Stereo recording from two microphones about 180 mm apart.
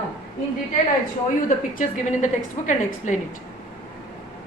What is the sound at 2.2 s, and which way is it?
Speech, 40° left (ahead or behind).